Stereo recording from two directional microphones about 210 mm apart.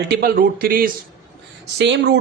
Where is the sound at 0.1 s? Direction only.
45° right (ahead or behind).